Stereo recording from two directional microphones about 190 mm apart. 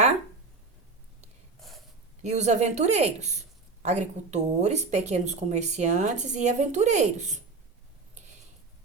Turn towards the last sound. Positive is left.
turn(degrees=-40)  # may be behind; listen again after turning